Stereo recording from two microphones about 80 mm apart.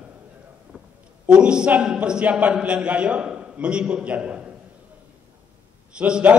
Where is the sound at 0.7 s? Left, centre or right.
Centre.